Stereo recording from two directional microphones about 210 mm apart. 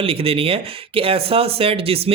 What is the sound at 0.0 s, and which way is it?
Speech, 25° right (ahead or behind).